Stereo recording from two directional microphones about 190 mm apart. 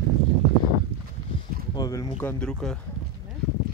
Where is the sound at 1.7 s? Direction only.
20° left (ahead or behind).